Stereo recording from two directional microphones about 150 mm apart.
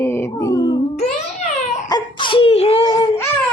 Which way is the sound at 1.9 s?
30° left (ahead or behind).